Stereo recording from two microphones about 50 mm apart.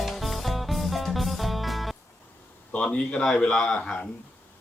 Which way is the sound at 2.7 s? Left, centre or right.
Left.